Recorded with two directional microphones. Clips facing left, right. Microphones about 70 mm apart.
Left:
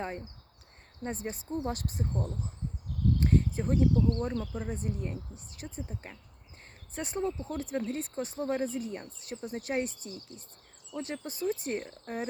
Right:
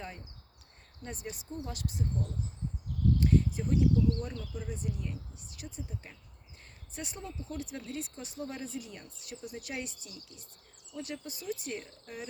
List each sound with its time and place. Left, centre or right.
1.0 s speech: left